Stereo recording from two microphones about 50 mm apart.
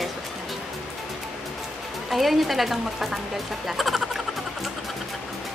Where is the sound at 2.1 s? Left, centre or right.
Centre.